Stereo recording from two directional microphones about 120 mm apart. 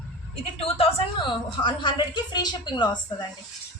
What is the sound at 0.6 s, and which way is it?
A woman's voice, 55° left (ahead or behind).